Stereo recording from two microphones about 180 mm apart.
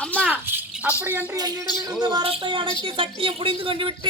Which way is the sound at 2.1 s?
25° right (ahead or behind).